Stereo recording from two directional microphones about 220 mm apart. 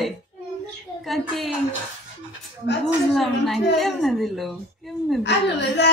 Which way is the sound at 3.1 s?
Centre (ahead or behind).